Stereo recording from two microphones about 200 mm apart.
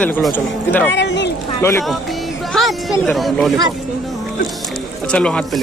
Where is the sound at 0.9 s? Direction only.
60° left (ahead or behind).